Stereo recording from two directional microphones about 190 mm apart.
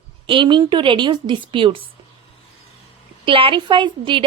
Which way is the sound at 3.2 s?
25° right (ahead or behind).